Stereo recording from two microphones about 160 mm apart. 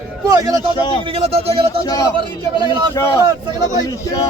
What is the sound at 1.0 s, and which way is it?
Speech, 35° right (ahead or behind).